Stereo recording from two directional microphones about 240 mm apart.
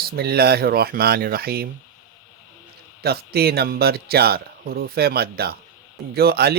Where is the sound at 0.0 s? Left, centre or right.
Right.